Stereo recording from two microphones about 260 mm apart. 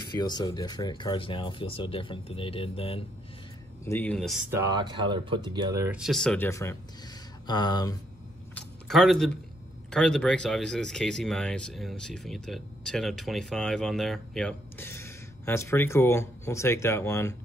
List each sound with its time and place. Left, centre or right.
0.0 s speech: centre
3.8 s speech: centre
8.5 s a sound: centre
9.8 s speech: centre